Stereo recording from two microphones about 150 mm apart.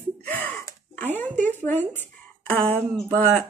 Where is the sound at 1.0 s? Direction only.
10° left (ahead or behind).